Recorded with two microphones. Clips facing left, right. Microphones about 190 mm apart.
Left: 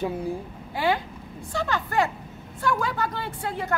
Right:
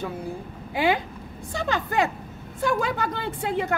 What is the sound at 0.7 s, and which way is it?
A woman's voice, 15° right (ahead or behind).